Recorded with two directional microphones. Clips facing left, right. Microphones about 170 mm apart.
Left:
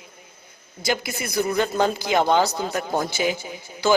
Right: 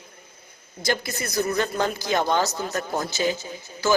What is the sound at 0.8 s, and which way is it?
A man's voice, 10° left (ahead or behind).